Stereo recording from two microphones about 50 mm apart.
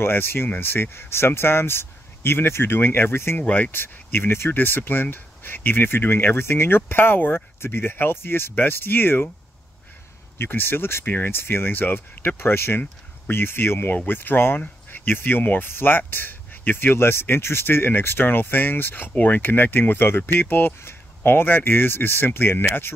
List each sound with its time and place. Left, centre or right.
0.0 s speech: left
3.3 s speech: left
3.7 s speech: left
4.6 s speech: left
10.3 s speech: left